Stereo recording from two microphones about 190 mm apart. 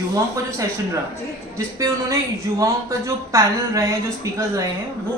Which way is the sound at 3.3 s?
15° right (ahead or behind).